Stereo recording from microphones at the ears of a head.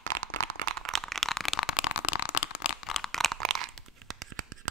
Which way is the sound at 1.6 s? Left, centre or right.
Left.